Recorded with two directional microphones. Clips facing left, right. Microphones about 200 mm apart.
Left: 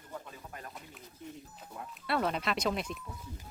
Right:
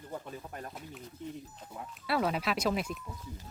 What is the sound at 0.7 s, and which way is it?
Speech, centre (ahead or behind).